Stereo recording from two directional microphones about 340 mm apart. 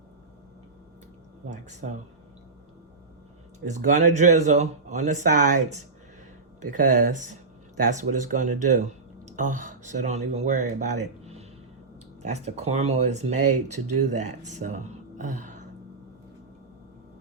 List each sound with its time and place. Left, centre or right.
1.5 s speech: right
3.7 s speech: right